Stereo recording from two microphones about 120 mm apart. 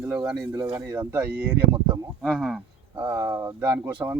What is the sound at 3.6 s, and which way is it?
Speech, 15° right (ahead or behind).